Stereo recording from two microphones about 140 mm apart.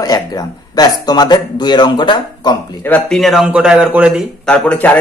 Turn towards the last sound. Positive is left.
turn(degrees=10)  # may be behind; listen again after turning